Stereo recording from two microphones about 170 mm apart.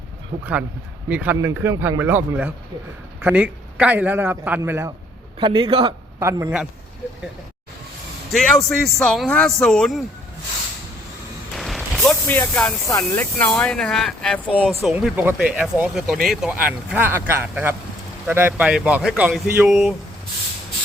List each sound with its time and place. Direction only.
1.0 s a man's voice: 10° right (ahead or behind)
5.4 s a man's voice: 30° right (ahead or behind)
6.1 s a man's voice: 20° right (ahead or behind)
8.3 s speech: centre (ahead or behind)
11.5 s a sound: centre (ahead or behind)
13.0 s a man's voice: 5° left (ahead or behind)